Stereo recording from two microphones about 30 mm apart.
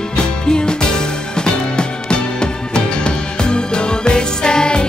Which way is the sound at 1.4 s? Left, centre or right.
Left.